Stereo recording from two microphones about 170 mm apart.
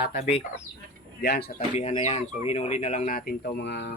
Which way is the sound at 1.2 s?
75° left (ahead or behind).